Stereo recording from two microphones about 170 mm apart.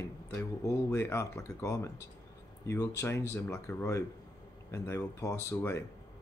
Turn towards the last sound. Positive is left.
turn(degrees=15)  # may be behind; listen again after turning